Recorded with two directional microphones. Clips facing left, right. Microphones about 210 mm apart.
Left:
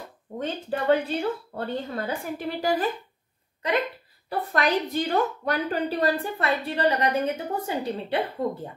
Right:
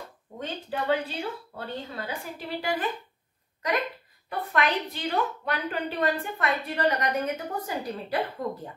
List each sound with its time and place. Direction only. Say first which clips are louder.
0.4 s a woman's voice: left 4 dB; 45° left (ahead or behind)
4.3 s a woman's voice: left 3 dB; 35° left (ahead or behind)